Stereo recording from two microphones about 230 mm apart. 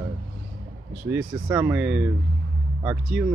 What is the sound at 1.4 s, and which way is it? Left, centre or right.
Speech, centre.